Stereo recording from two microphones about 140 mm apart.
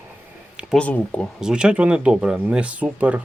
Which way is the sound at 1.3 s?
5° right (ahead or behind).